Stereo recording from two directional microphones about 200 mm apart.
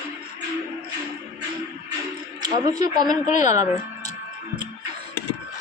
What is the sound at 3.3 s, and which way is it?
Speech, 35° left (ahead or behind).